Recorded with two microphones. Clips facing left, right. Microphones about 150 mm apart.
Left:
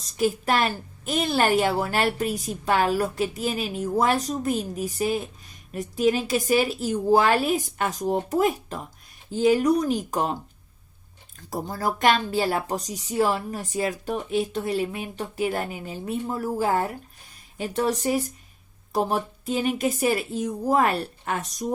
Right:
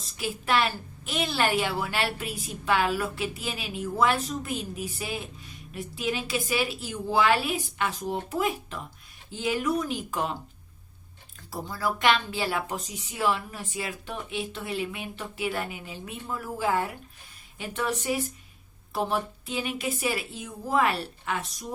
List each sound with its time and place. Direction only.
0.0 s a woman's voice: 45° left (ahead or behind)
11.5 s a woman's voice: 45° left (ahead or behind)